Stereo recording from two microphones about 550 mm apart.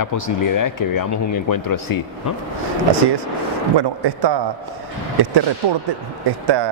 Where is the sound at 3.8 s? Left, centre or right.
Right.